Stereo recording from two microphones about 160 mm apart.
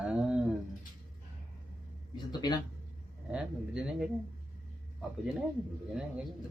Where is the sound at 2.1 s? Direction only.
25° left (ahead or behind).